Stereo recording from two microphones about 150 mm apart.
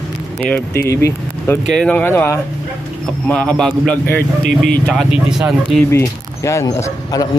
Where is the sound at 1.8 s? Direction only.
10° left (ahead or behind).